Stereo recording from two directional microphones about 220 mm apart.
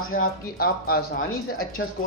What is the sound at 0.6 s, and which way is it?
Speech, 45° left (ahead or behind).